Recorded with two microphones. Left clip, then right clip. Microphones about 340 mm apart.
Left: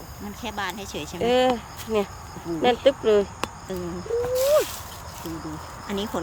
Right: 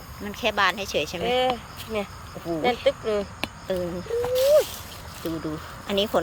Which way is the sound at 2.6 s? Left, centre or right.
Left.